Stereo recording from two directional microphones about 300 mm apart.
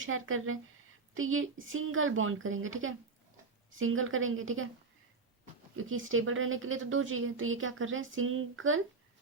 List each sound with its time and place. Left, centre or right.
0.0 s speech: right
5.7 s speech: right